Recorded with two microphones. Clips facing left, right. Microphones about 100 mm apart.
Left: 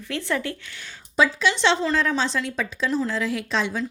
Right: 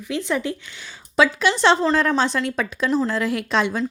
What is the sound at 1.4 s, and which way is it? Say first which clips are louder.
Speech: right 4 dB; 50° right (ahead or behind).